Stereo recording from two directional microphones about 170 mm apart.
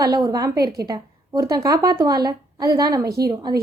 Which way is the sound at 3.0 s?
65° right (ahead or behind).